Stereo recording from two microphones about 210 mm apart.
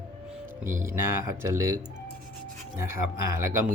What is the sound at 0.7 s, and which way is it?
Speech, 40° right (ahead or behind).